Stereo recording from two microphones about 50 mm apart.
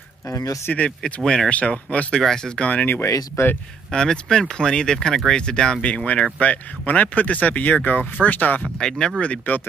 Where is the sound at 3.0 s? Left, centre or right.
Left.